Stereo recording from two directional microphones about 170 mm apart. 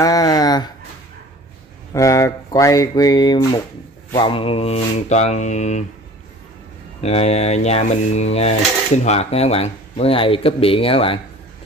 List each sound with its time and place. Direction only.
0.0 s a sound: 20° left (ahead or behind)
2.0 s speech: 20° left (ahead or behind); by 5.9 s 45° left (ahead or behind)
7.0 s speech: 35° left (ahead or behind)